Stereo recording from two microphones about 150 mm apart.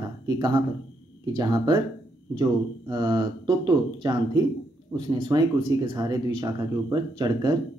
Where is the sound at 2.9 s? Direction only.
25° right (ahead or behind).